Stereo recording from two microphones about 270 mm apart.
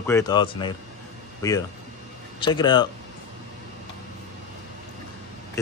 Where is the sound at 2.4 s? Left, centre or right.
Centre.